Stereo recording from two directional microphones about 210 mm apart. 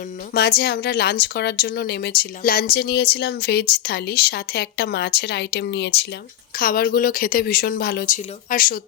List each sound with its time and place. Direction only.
0.3 s a woman's voice: 50° left (ahead or behind)